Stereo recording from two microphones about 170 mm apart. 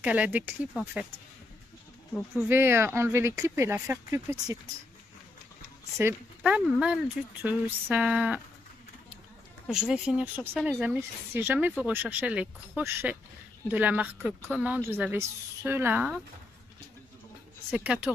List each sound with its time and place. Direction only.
0.0 s speech: 10° right (ahead or behind)
2.1 s speech: centre (ahead or behind)
2.5 s speech: 15° right (ahead or behind)
5.9 s speech: 10° right (ahead or behind)
9.7 s speech: 5° right (ahead or behind)
17.6 s speech: 5° right (ahead or behind)